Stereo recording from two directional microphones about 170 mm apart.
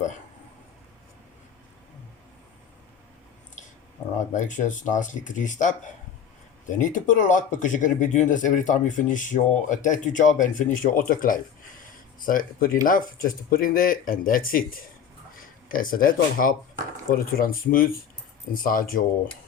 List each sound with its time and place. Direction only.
4.4 s speech: 45° left (ahead or behind)